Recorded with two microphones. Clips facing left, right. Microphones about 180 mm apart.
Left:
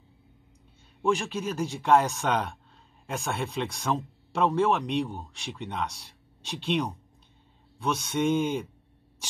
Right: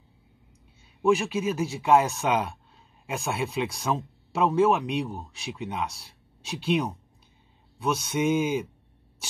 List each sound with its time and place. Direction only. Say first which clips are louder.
1.0 s speech: right 4 dB; 5° right (ahead or behind)